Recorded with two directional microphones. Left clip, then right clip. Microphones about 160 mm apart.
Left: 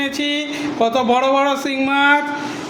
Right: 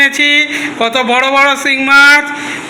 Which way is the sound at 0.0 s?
5° left (ahead or behind).